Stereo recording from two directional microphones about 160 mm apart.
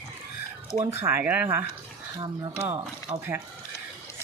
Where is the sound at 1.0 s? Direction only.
10° right (ahead or behind).